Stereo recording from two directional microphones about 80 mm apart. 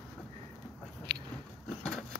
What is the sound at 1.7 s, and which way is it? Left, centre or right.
Vehicle, centre.